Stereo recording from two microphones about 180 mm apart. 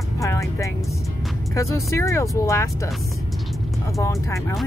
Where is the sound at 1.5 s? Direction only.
15° left (ahead or behind).